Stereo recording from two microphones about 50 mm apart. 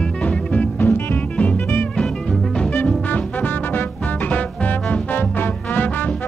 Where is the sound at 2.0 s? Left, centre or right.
Centre.